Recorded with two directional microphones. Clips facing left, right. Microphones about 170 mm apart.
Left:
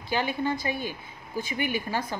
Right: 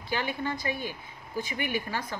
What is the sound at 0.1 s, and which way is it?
Speech, 30° left (ahead or behind).